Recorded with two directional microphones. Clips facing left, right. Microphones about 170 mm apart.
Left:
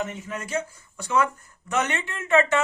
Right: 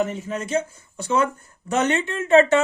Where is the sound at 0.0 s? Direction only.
30° right (ahead or behind).